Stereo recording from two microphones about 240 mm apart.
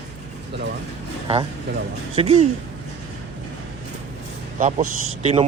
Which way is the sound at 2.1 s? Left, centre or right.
Right.